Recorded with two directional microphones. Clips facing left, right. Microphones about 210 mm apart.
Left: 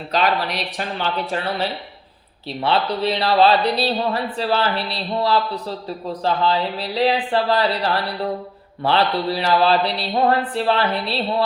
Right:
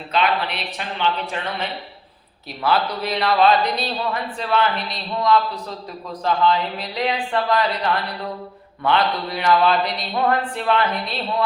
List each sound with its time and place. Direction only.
0.1 s speech: 40° left (ahead or behind)